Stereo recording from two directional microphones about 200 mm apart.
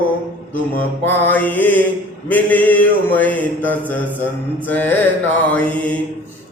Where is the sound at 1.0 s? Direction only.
10° left (ahead or behind).